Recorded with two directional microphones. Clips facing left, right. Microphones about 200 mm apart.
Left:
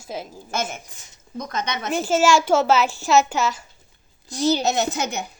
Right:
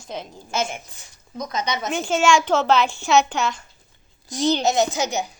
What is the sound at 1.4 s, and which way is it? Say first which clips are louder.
Speech: right 2 dB; 55° left (ahead or behind).